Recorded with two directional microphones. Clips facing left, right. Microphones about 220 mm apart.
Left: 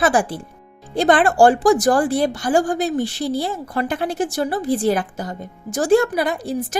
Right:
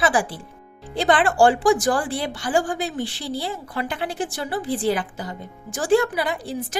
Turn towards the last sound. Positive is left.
turn(degrees=45)  # may be behind; listen again after turning